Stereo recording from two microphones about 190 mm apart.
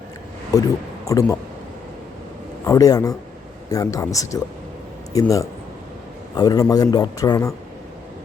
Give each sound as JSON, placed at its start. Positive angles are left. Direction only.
{"t": 0.5, "sound": "a man's voice", "side_deg": 20}
{"t": 2.6, "sound": "a man's voice", "side_deg": 20}